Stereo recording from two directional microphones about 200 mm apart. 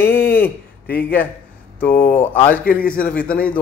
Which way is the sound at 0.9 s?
50° left (ahead or behind).